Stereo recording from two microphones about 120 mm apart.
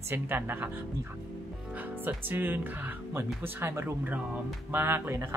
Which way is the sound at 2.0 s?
15° right (ahead or behind).